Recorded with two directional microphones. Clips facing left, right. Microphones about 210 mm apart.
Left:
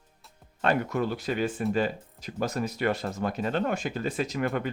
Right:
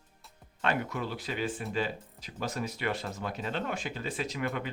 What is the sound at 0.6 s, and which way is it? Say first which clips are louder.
Speech: left 6 dB; 45° left (ahead or behind).